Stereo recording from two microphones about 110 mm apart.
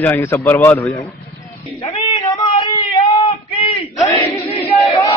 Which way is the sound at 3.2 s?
60° left (ahead or behind).